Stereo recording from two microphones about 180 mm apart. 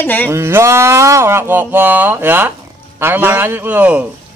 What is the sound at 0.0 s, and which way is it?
Speech, 10° left (ahead or behind).